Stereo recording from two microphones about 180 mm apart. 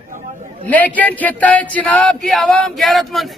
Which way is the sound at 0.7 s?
10° left (ahead or behind).